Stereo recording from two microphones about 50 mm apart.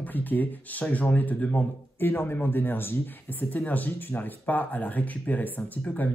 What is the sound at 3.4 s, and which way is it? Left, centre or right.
Speech, left.